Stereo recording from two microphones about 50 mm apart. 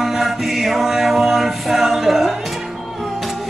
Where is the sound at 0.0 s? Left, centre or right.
Centre.